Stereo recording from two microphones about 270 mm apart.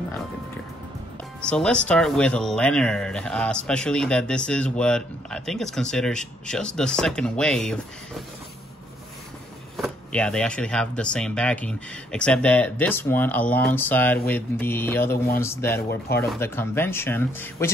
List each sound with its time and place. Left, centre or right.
1.4 s speech: centre
9.8 s speech: centre
15.0 s speech: left
15.4 s speech: centre